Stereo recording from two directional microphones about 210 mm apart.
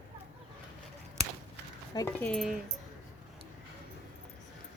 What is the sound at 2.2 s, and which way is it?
Speech, centre (ahead or behind).